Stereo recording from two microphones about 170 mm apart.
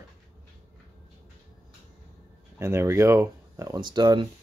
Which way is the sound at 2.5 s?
15° right (ahead or behind).